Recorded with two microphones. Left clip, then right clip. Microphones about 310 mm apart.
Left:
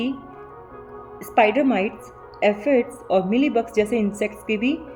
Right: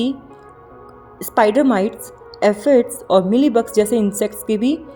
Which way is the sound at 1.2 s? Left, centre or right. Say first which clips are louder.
Right 3 dB; right.